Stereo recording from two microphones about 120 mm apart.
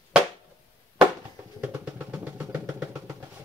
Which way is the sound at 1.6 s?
10° right (ahead or behind).